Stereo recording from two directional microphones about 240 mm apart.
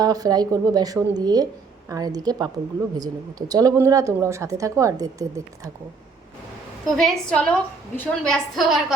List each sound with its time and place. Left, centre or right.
0.0 s speech: centre
6.8 s a woman's voice: centre